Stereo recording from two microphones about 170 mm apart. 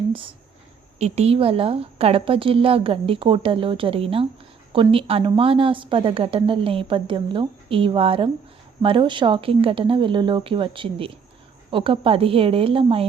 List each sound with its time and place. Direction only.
0.1 s speech: 30° right (ahead or behind)